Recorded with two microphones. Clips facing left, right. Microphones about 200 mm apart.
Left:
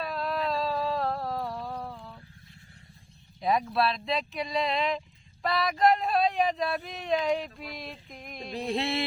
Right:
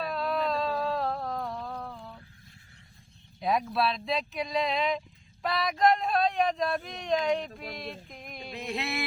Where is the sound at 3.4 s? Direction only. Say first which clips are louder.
Left 1 dB; centre (ahead or behind).